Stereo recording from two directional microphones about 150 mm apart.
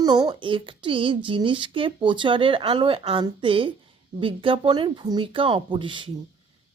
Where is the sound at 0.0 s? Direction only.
30° right (ahead or behind).